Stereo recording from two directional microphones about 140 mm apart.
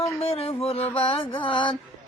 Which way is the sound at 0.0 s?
45° left (ahead or behind).